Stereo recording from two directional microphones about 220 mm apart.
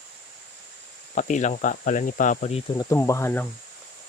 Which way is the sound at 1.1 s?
35° left (ahead or behind).